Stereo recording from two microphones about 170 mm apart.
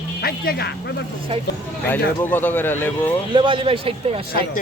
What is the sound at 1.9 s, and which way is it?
Speech, 10° left (ahead or behind).